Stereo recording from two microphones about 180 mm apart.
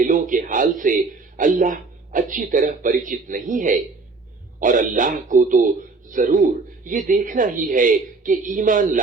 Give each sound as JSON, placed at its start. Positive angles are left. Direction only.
{"t": 0.0, "sound": "a man's voice", "side_deg": -50}